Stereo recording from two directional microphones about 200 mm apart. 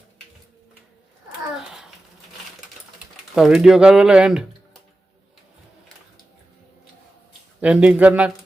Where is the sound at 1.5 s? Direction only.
Centre (ahead or behind).